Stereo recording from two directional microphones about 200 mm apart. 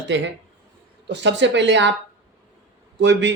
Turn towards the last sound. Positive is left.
turn(degrees=-65)  # may be behind; listen again after turning